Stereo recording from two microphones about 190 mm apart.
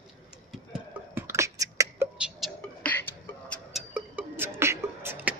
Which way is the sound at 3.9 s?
10° right (ahead or behind).